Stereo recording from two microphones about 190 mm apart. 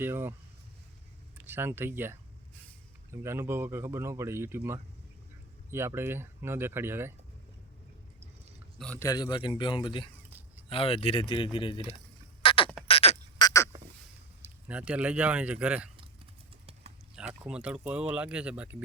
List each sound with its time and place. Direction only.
0.0 s speech: 10° right (ahead or behind)
1.5 s speech: 10° right (ahead or behind)
8.8 s a man's voice: 5° left (ahead or behind)
9.0 s a man's voice: 20° left (ahead or behind)
12.4 s a sound: 25° left (ahead or behind)
13.4 s frog: 15° left (ahead or behind)
14.4 s speech: 5° right (ahead or behind)
17.2 s speech: 5° right (ahead or behind)